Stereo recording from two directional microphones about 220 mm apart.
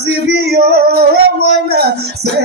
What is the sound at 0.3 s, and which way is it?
Music, 45° right (ahead or behind).